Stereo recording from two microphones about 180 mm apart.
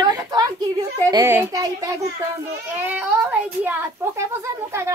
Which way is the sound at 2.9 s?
10° right (ahead or behind).